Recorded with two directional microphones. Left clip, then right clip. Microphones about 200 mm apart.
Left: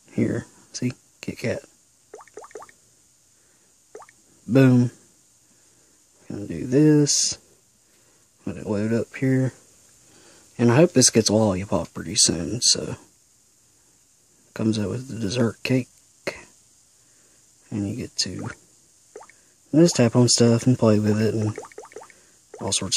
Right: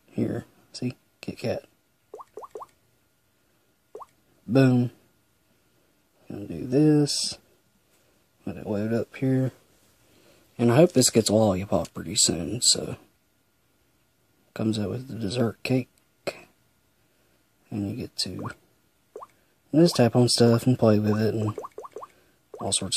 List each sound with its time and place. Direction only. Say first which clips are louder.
0.1 s speech: left 4 dB; 15° left (ahead or behind)
4.5 s speech: left 3 dB; 15° left (ahead or behind)
6.2 s speech: left 4 dB; 15° left (ahead or behind)
8.5 s speech: left 3 dB; 15° left (ahead or behind)
14.5 s speech: left 3 dB; 15° left (ahead or behind)
17.6 s speech: left 3 dB; 15° left (ahead or behind)
19.7 s speech: left 2 dB; 15° left (ahead or behind)
21.5 s a sound: left 1 dB; 40° left (ahead or behind)
22.6 s speech: left 3 dB; 15° left (ahead or behind)